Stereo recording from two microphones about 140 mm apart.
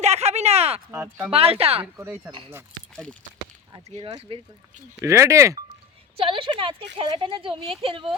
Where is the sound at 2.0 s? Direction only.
15° right (ahead or behind).